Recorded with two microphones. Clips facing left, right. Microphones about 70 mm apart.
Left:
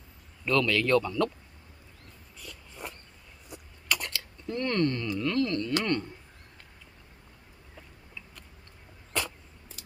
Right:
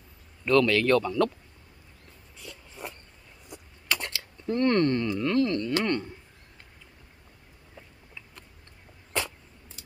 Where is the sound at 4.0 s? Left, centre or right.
Right.